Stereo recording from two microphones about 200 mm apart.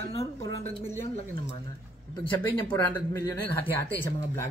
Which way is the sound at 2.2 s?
10° left (ahead or behind).